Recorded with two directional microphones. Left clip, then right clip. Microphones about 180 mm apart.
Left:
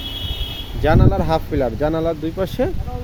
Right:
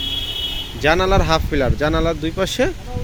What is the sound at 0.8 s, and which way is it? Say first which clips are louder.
Speech: right 2 dB; 5° left (ahead or behind).